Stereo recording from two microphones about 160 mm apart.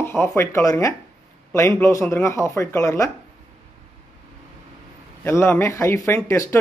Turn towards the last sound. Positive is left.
turn(degrees=15)  # may be behind; listen again after turning